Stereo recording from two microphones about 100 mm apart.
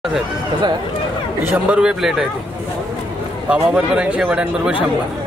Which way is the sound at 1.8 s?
5° right (ahead or behind).